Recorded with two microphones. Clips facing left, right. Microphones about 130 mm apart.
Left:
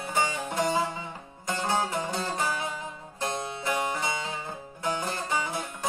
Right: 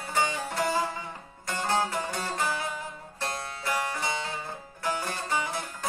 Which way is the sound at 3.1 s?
20° left (ahead or behind).